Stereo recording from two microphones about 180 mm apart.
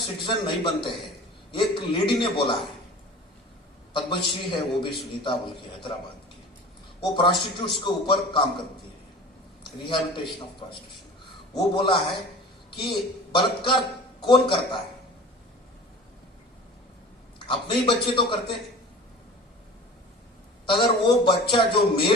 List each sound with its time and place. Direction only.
0.0 s a man's voice: 25° left (ahead or behind)
3.9 s a man's voice: 25° left (ahead or behind)
7.0 s a man's voice: 25° left (ahead or behind)
9.6 s a man's voice: 25° left (ahead or behind)
17.4 s a man's voice: 30° left (ahead or behind)
20.7 s a man's voice: 30° left (ahead or behind)